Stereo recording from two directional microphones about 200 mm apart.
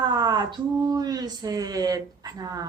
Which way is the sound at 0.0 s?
20° right (ahead or behind).